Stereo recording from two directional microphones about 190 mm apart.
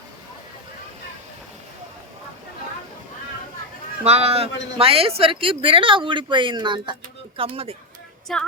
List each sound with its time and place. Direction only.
4.0 s speech: 35° right (ahead or behind)
8.3 s female singing: centre (ahead or behind)